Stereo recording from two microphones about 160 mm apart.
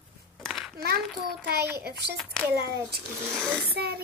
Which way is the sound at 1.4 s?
85° right.